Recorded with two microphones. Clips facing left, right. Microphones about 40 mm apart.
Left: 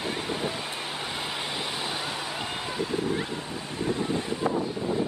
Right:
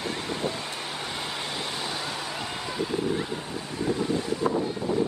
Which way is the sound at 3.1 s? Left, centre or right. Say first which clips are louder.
Right 1 dB; centre.